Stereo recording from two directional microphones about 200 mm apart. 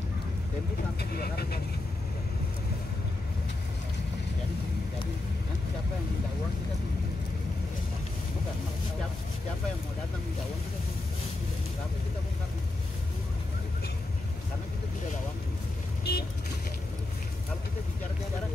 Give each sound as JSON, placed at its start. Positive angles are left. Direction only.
{"t": 1.1, "sound": "speech", "side_deg": 50}
{"t": 16.0, "sound": "vehicle", "side_deg": 55}